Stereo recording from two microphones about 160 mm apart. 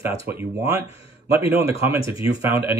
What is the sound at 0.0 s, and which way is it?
Speech, 15° right (ahead or behind).